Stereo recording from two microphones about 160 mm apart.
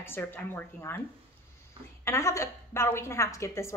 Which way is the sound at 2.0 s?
15° left (ahead or behind).